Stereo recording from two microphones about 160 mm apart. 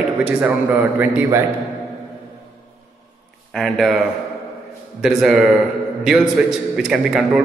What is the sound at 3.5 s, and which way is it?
Speech, centre (ahead or behind).